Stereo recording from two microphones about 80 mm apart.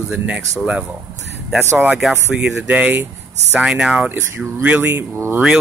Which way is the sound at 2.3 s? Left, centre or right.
Centre.